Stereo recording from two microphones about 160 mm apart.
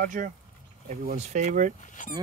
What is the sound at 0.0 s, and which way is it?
Speech, 55° right (ahead or behind).